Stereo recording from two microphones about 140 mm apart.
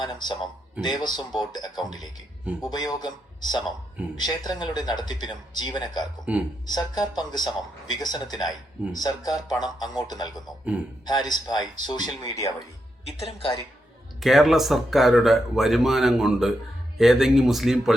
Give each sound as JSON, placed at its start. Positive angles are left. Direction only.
{"t": 0.0, "sound": "speech", "side_deg": 30}
{"t": 6.3, "sound": "speech", "side_deg": -10}
{"t": 6.7, "sound": "speech", "side_deg": 30}
{"t": 13.1, "sound": "speech", "side_deg": 45}
{"t": 14.2, "sound": "speech", "side_deg": 0}